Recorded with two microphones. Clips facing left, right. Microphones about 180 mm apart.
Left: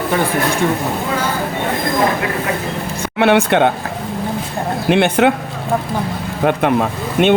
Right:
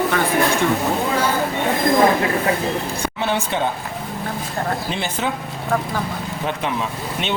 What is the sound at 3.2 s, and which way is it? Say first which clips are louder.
Speech: left 11 dB; 70° left (ahead or behind).